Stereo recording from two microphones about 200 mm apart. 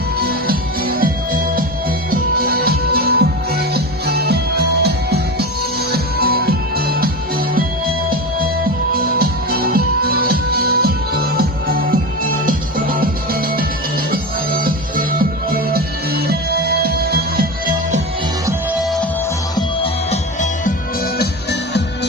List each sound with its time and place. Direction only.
0.2 s music: 50° right (ahead or behind)
9.1 s music: 50° right (ahead or behind)
19.5 s music: 30° left (ahead or behind); by 21.8 s 55° left (ahead or behind)